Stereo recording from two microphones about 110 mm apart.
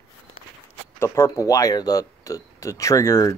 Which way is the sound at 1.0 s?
25° left (ahead or behind).